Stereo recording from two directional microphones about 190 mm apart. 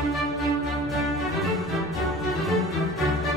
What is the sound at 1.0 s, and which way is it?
Music, centre (ahead or behind).